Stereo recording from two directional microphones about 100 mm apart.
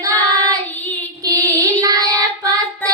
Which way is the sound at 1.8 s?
35° right (ahead or behind).